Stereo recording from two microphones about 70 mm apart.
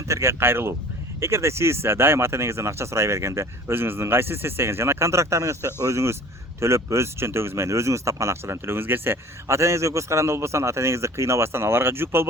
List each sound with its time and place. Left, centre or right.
0.1 s speech: right